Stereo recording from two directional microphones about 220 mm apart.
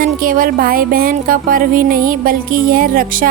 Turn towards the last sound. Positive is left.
turn(degrees=-40)  # may be behind; listen again after turning